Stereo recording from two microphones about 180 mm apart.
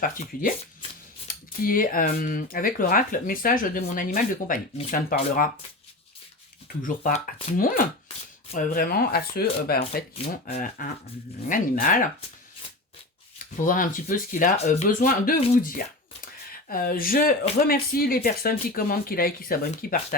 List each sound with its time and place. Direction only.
0.0 s speech: 50° left (ahead or behind)
6.8 s speech: 50° left (ahead or behind)
13.6 s speech: 50° left (ahead or behind)
16.2 s a sound: 55° left (ahead or behind)
17.7 s speech: 55° left (ahead or behind)